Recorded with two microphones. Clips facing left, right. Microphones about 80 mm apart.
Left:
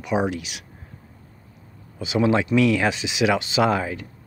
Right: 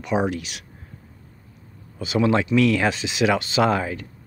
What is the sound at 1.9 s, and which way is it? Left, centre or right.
Speech, centre.